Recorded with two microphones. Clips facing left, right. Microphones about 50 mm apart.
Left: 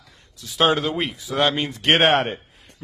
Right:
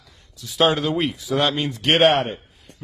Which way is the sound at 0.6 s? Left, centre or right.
Left.